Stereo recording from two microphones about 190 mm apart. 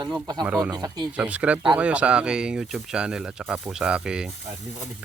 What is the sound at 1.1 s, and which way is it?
Speech, 5° right (ahead or behind).